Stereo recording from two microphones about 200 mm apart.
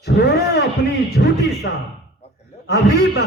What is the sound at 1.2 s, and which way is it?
Speech, 55° left (ahead or behind).